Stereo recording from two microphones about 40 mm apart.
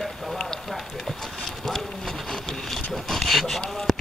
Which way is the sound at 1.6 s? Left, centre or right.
Centre.